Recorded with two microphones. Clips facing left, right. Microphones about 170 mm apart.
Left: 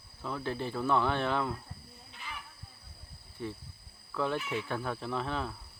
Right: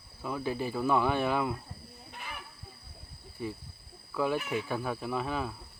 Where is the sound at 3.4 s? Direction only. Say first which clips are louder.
Right 2 dB; 10° right (ahead or behind).